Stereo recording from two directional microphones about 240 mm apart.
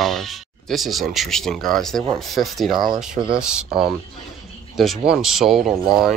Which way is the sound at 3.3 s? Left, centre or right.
Centre.